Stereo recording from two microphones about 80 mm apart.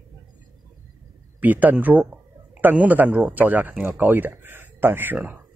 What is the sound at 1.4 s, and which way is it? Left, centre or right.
Speech, right.